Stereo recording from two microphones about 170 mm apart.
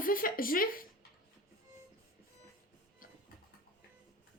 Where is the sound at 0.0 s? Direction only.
55° left (ahead or behind).